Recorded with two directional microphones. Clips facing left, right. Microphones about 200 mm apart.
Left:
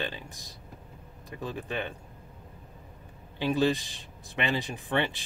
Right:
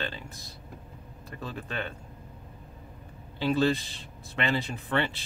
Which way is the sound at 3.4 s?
15° left (ahead or behind).